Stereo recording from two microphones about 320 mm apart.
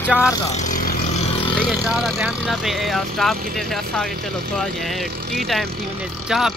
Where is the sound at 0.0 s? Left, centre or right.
Centre.